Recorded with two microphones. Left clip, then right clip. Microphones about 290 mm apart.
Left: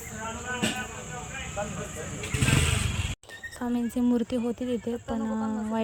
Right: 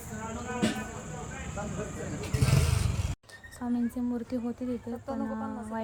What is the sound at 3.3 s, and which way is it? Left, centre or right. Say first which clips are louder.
Speech: left 2 dB; left.